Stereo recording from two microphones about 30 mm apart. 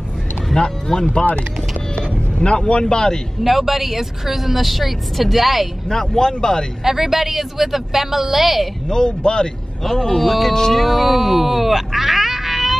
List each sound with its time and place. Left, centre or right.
0.9 s speech: left
2.4 s speech: left
3.4 s a woman's voice: centre
5.9 s speech: centre
6.8 s a woman's voice: centre
8.8 s speech: left
10.1 s a woman's voice: centre
10.5 s speech: centre
10.8 s speech: centre